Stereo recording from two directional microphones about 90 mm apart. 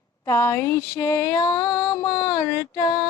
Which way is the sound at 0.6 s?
35° left (ahead or behind).